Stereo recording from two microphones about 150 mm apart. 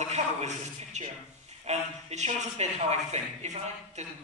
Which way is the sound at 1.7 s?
45° right (ahead or behind).